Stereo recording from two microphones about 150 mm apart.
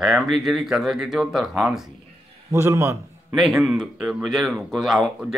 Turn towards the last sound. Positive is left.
turn(degrees=0)  # may be behind; listen again after turning